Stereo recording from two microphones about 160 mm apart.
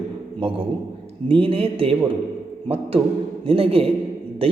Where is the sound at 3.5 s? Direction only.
35° right (ahead or behind).